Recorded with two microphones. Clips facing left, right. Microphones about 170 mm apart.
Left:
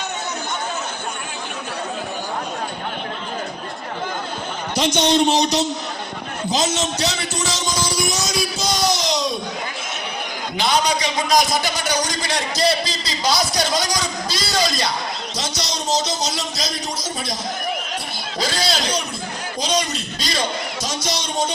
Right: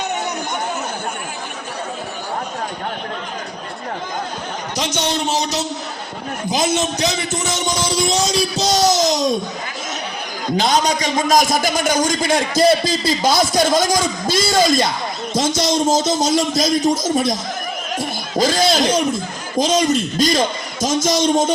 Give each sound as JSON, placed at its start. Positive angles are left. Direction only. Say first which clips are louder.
{"t": 4.8, "sound": "a man's voice", "louder": "left 5 dB", "side_deg": -10}
{"t": 7.4, "sound": "music", "louder": "right 1 dB", "side_deg": -20}
{"t": 8.5, "sound": "a sound", "louder": "right 7 dB", "side_deg": -40}
{"t": 10.6, "sound": "a man's voice", "louder": "right 2 dB", "side_deg": -45}
{"t": 18.3, "sound": "a man's voice", "louder": "right 7 dB", "side_deg": -45}